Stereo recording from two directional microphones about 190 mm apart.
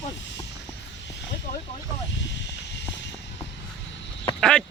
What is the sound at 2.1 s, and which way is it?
Snake, 70° left (ahead or behind).